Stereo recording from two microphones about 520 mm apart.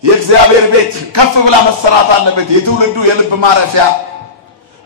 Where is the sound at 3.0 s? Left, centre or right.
Right.